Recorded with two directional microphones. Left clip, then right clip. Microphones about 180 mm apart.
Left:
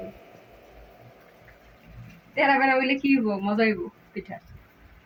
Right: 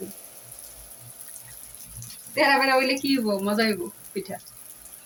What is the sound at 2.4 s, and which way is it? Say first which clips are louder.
Female singing: right 1 dB; 20° right (ahead or behind).